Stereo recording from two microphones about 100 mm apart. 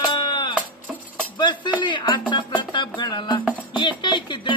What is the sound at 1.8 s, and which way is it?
Music, 50° left (ahead or behind).